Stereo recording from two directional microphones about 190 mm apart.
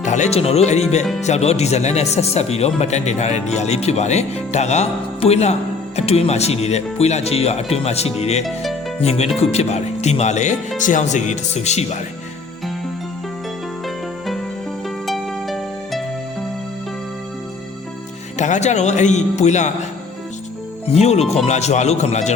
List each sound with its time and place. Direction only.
0.0 s speech: 40° left (ahead or behind)
14.8 s music: centre (ahead or behind)
18.3 s speech: 40° left (ahead or behind)
20.8 s speech: 35° left (ahead or behind)